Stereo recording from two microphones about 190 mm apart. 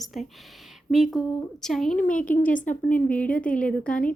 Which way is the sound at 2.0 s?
45° left (ahead or behind).